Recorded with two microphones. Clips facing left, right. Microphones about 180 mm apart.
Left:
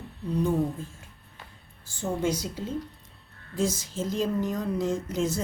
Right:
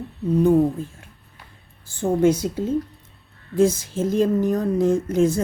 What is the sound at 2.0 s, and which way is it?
Speech, 55° right (ahead or behind).